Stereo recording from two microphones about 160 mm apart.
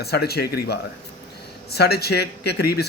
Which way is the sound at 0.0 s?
85° left.